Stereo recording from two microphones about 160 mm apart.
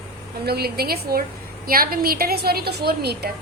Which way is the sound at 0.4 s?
80° right.